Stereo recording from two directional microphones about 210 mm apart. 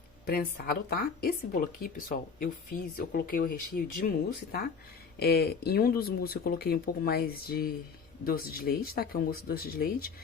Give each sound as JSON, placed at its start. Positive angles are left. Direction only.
{"t": 0.3, "sound": "speech", "side_deg": 45}